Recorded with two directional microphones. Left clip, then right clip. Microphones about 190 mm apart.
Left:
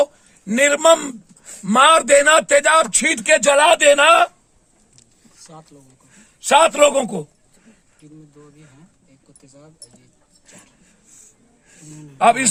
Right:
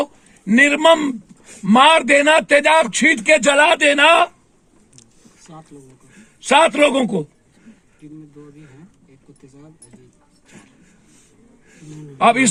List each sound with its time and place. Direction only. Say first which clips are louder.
0.0 s a sound: left 5 dB; 30° left (ahead or behind)
1.5 s speech: right 1 dB; 35° left (ahead or behind)
6.6 s speech: even; 25° left (ahead or behind)
12.1 s a man's voice: right 1 dB; 20° left (ahead or behind)